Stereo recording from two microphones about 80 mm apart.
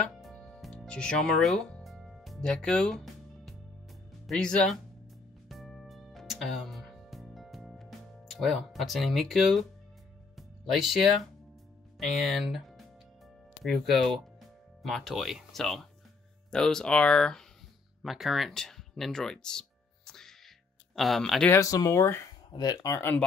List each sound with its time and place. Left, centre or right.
0.6 s music: centre
0.8 s speech: centre
1.9 s music: centre
4.3 s speech: centre
5.5 s music: centre
12.0 s speech: centre
18.0 s speech: centre
20.1 s music: centre
20.9 s speech: centre
21.5 s speech: left
22.5 s speech: left